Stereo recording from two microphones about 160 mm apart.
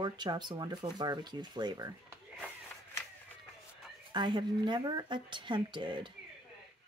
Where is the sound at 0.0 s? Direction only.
25° right (ahead or behind).